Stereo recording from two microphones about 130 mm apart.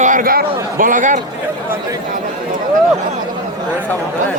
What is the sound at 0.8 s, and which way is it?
Speech, 90° right.